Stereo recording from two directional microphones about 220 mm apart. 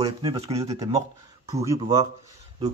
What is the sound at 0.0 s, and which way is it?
Speech, 25° right (ahead or behind).